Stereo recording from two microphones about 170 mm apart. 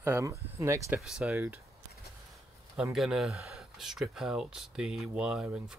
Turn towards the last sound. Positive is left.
turn(degrees=-5)  # may be behind; listen again after turning